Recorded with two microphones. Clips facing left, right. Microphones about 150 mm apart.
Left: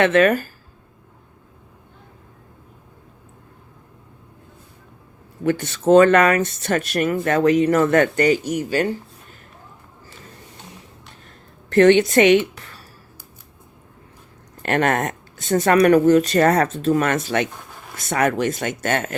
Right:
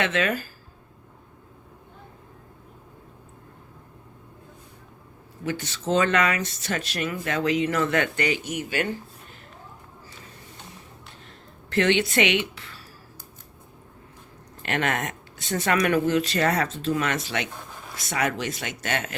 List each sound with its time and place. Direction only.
0.0 s speech: 55° left (ahead or behind)
5.4 s speech: 55° left (ahead or behind); by 9.0 s 35° left (ahead or behind)
11.7 s speech: 45° left (ahead or behind)
14.6 s speech: 50° left (ahead or behind)